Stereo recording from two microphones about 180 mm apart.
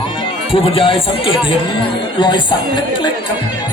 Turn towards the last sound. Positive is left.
turn(degrees=25)  # may be behind; listen again after turning